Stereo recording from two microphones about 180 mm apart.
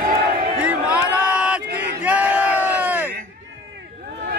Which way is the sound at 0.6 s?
5° right (ahead or behind).